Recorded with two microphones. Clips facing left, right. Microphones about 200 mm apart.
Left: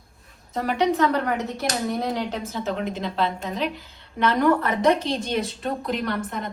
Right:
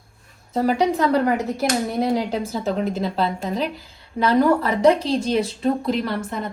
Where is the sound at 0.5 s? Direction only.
35° right (ahead or behind).